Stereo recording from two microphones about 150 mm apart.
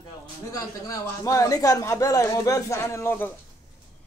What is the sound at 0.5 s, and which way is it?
Speech, 20° left (ahead or behind).